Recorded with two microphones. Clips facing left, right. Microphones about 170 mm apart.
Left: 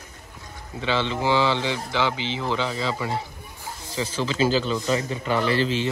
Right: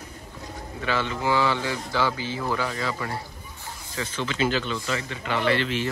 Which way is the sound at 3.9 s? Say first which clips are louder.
Left 4 dB; 30° left (ahead or behind).